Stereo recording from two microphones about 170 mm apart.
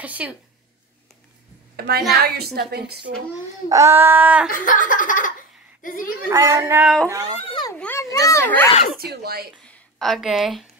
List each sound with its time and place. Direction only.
0.0 s a sound: 10° right (ahead or behind)
1.8 s a woman's voice: 70° right (ahead or behind)
3.6 s a sound: 15° right (ahead or behind)
4.5 s a child's voice: 55° left (ahead or behind)
6.2 s a sound: 15° right (ahead or behind)
7.1 s a child's voice: 20° right (ahead or behind)
7.4 s children playing: 30° left (ahead or behind)
7.7 s a child's voice: 10° left (ahead or behind)
8.9 s speech: 65° right (ahead or behind)
9.7 s a woman's voice: centre (ahead or behind)